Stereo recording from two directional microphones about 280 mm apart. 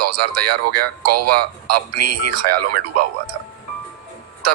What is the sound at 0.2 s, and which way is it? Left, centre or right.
Speech, right.